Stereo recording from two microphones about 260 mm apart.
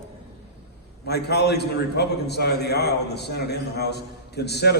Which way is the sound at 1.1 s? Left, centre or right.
Left.